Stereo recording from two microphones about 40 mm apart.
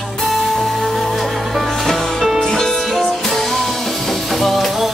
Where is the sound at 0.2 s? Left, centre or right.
Centre.